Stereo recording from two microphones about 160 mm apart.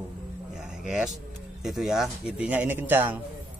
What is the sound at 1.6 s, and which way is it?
Speech, centre (ahead or behind).